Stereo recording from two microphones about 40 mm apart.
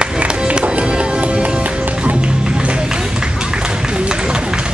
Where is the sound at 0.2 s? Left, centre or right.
Right.